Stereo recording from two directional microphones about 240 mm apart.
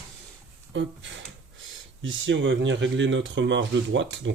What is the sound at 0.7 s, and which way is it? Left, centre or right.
Speech, right.